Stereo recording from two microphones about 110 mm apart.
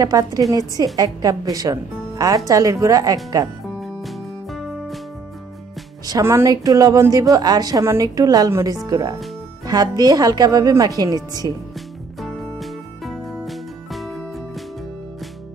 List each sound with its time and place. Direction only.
0.0 s a woman's voice: 35° right (ahead or behind)
3.8 s music: centre (ahead or behind)
6.2 s a woman's voice: 25° right (ahead or behind)
12.2 s music: centre (ahead or behind)